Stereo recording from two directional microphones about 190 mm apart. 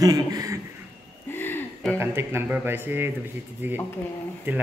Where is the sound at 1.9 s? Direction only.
10° right (ahead or behind).